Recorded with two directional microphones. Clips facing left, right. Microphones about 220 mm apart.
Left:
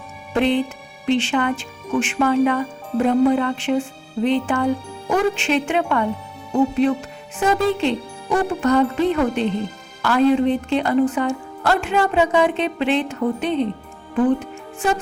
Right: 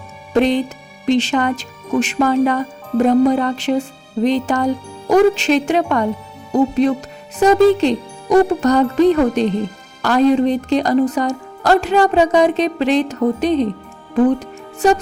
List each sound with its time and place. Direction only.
0.3 s a woman's voice: 40° right (ahead or behind)
14.3 s music: 40° right (ahead or behind)